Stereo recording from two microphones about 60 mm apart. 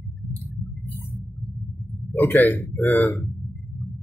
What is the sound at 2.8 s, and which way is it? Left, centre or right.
Speech, left.